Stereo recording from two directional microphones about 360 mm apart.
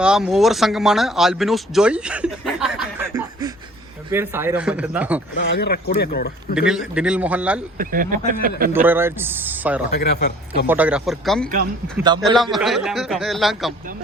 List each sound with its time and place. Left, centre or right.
0.0 s a man's voice: centre
5.4 s speech: left
6.5 s a man's voice: centre
7.8 s speech: right
8.7 s a man's voice: centre
10.0 s speech: left
10.7 s a man's voice: centre
11.9 s a man's voice: centre
12.4 s a man's voice: centre